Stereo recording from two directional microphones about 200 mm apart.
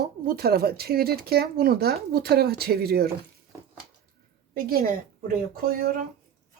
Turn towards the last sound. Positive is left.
turn(degrees=-45)  # may be behind; listen again after turning